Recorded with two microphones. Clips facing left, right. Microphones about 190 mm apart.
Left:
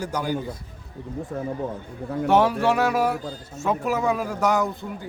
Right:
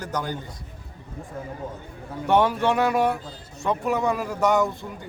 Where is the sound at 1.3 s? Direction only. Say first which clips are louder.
Left 5 dB; 60° left (ahead or behind).